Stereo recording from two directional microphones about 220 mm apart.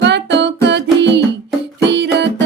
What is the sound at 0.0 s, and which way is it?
Music, 50° right (ahead or behind).